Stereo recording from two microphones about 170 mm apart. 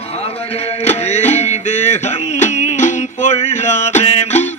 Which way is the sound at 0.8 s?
40° left (ahead or behind).